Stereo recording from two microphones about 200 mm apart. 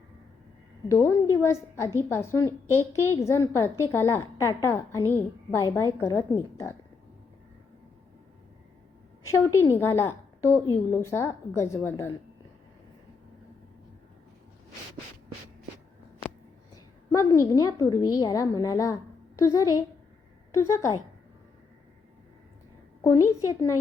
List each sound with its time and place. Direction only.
0.9 s a woman's voice: 15° left (ahead or behind)
9.3 s a woman's voice: 15° left (ahead or behind)
16.7 s a woman's voice: 15° left (ahead or behind)
23.4 s a woman's voice: 15° left (ahead or behind)